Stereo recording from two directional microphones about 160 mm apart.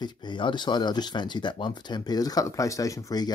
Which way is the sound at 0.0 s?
30° left (ahead or behind).